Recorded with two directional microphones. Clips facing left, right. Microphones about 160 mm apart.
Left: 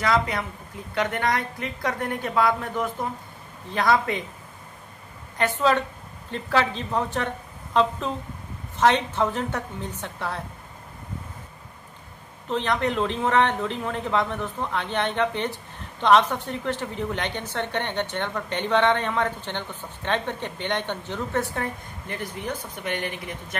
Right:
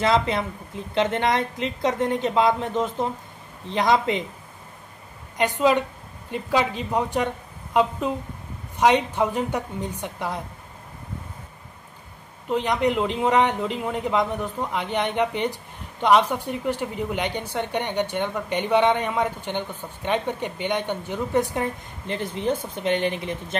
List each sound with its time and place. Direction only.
0.0 s a woman's voice: 25° right (ahead or behind)
5.4 s speech: 15° right (ahead or behind)
12.4 s speech: 15° right (ahead or behind)